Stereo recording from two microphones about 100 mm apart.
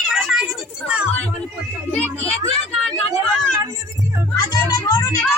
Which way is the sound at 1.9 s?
15° left (ahead or behind).